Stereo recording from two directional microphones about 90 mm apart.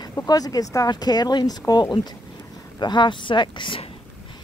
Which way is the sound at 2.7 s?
55° left (ahead or behind).